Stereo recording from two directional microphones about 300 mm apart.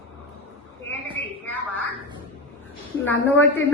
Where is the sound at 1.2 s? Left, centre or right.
Left.